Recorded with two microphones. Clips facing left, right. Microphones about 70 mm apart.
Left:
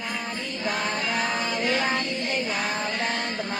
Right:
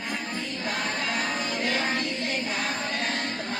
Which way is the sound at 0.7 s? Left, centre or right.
Left.